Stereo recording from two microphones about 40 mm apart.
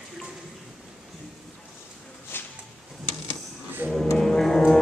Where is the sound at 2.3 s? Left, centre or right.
Left.